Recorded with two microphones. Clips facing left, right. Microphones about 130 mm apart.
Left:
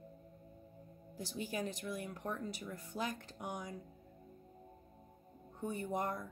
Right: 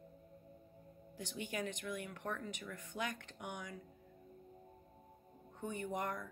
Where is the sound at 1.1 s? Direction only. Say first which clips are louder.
Left 2 dB; 35° left (ahead or behind).